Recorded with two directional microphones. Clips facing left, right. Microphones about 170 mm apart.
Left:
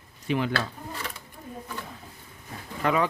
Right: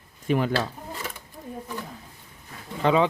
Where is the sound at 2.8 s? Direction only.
25° right (ahead or behind).